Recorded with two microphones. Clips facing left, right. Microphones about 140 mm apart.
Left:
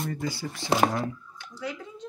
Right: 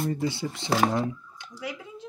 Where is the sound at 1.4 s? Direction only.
10° right (ahead or behind).